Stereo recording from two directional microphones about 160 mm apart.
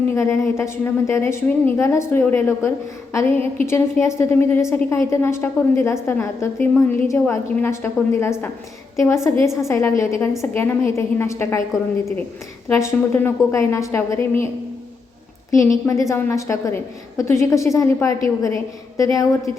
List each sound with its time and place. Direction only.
0.1 s a woman's voice: 15° left (ahead or behind)
12.6 s a woman's voice: 15° left (ahead or behind)
15.5 s a woman's voice: 20° left (ahead or behind)